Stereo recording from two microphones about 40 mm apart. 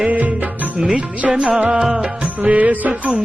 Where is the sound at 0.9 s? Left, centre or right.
Right.